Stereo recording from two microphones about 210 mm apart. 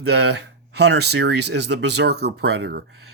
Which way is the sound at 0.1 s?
55° right (ahead or behind).